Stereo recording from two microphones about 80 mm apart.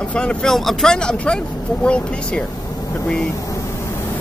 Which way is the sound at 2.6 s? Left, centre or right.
Left.